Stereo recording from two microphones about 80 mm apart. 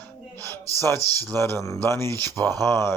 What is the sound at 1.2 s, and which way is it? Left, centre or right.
Speech, left.